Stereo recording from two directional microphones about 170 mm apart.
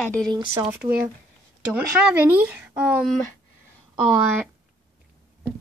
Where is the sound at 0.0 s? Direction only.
5° left (ahead or behind).